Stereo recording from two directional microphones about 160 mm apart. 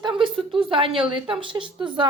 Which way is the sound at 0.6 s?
35° right (ahead or behind).